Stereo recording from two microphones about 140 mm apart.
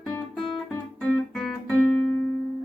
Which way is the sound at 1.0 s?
5° left (ahead or behind).